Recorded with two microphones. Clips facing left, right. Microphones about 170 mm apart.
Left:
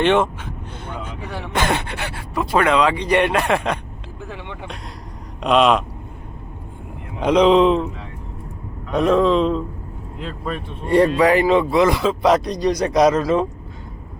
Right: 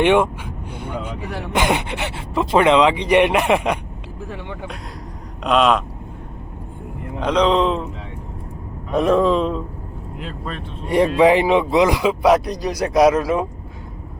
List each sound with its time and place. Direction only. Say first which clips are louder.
0.0 s speech: right 1 dB; 10° right (ahead or behind)
1.5 s speech: right 2 dB; 15° right (ahead or behind)
5.4 s speech: left 1 dB; centre (ahead or behind)
7.2 s speech: left 4 dB; 10° left (ahead or behind)
8.9 s speech: even; 5° right (ahead or behind)
10.8 s speech: right 1 dB; 15° right (ahead or behind)